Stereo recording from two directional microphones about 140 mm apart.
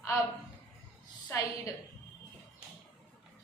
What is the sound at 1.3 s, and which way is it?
Speech, 20° left (ahead or behind).